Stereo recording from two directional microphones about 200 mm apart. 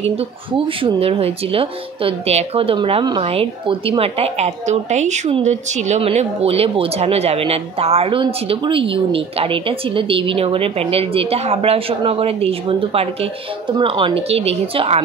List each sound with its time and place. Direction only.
0.0 s speech: 30° right (ahead or behind)